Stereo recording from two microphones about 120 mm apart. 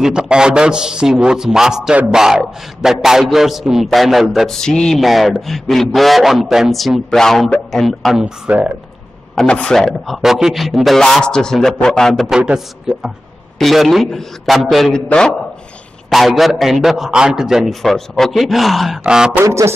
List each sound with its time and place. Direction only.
0.0 s a man's voice: 5° right (ahead or behind)
9.3 s a man's voice: 5° left (ahead or behind)
19.4 s music: 25° right (ahead or behind)